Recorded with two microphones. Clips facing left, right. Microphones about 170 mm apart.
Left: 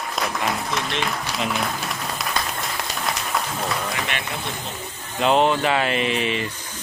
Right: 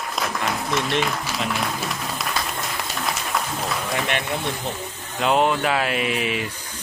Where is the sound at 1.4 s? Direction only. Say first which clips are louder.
Left 2 dB; centre (ahead or behind).